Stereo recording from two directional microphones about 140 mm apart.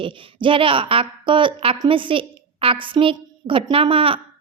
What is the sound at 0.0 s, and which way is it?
A woman's voice, 35° right (ahead or behind).